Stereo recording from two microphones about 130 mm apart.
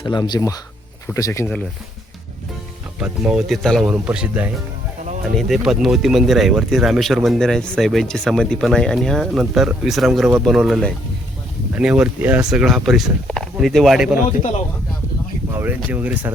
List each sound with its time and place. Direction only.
0.0 s speech: 35° left (ahead or behind)
3.0 s speech: 5° right (ahead or behind)
15.5 s speech: 15° right (ahead or behind)